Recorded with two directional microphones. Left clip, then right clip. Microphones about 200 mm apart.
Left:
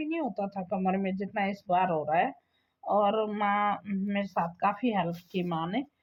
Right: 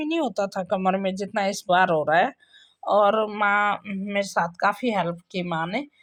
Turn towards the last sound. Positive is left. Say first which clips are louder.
# right 5 dB
turn(degrees=-30)  # may be behind; listen again after turning